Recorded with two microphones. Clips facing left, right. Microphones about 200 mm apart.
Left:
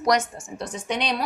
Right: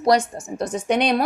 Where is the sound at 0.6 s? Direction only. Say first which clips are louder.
Right 7 dB; 45° right (ahead or behind).